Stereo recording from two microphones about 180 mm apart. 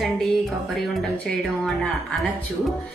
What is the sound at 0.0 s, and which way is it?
Speech, centre (ahead or behind).